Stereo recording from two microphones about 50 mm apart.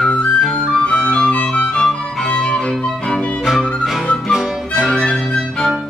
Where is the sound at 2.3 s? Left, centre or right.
Centre.